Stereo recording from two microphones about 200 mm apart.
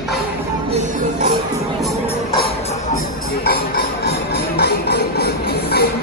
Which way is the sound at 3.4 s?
50° left (ahead or behind).